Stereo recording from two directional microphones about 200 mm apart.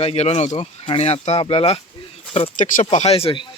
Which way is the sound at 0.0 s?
30° left (ahead or behind).